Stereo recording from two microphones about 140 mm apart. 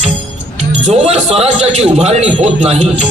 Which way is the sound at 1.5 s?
50° right (ahead or behind).